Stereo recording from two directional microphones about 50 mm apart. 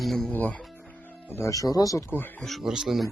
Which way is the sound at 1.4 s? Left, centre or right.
Left.